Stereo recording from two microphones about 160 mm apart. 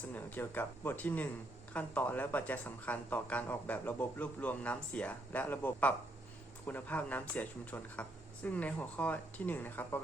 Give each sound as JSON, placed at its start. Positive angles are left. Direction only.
{"t": 0.1, "sound": "speech", "side_deg": 10}